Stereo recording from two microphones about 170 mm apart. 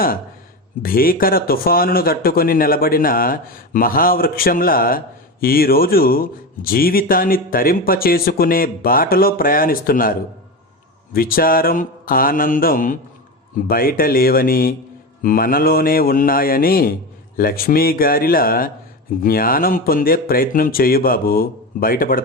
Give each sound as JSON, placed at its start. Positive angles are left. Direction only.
{"t": 0.8, "sound": "speech", "side_deg": 60}